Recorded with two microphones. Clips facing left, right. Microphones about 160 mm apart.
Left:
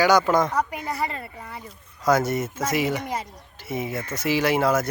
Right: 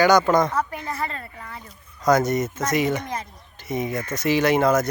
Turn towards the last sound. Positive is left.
turn(degrees=5)  # may be behind; listen again after turning